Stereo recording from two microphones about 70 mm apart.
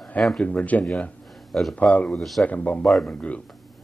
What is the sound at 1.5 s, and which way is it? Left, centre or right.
Speech, centre.